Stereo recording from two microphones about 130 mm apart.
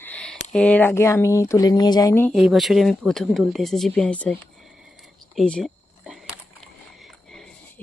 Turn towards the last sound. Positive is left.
turn(degrees=5)  # may be behind; listen again after turning